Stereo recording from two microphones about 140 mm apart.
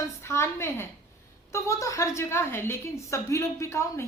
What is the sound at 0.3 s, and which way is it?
A woman's voice, 20° left (ahead or behind).